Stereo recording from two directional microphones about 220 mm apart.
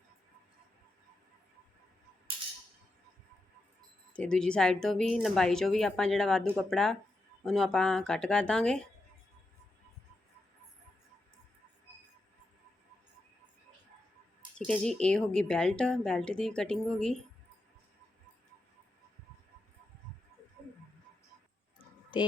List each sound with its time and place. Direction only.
4.1 s a woman's voice: 5° left (ahead or behind)
14.7 s a woman's voice: 5° left (ahead or behind)